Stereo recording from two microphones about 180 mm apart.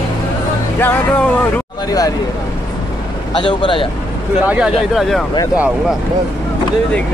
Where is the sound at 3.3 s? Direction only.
25° left (ahead or behind).